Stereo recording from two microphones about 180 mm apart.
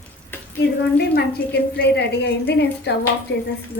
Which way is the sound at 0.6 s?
65° left (ahead or behind).